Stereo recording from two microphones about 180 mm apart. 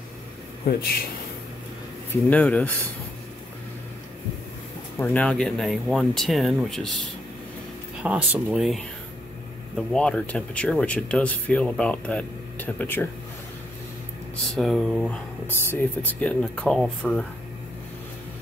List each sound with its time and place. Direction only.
0.7 s speech: 60° left (ahead or behind)
2.2 s speech: 10° left (ahead or behind)
4.9 s speech: 10° left (ahead or behind)
8.0 s speech: 5° right (ahead or behind); by 13.1 s 10° left (ahead or behind)
14.5 s speech: centre (ahead or behind)
15.4 s speech: 10° left (ahead or behind)